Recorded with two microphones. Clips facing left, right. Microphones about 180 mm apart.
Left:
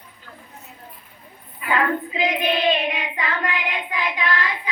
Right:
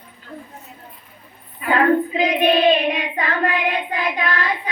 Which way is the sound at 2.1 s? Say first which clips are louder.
Right 5 dB; 40° right (ahead or behind).